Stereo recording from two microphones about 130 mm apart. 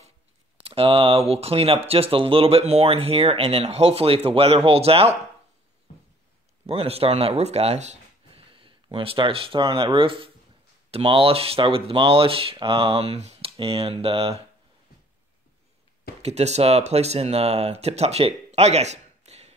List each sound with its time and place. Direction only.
0.7 s speech: 45° right (ahead or behind)
6.6 s speech: 50° right (ahead or behind)
8.5 s speech: 40° right (ahead or behind)
16.2 s speech: 55° right (ahead or behind)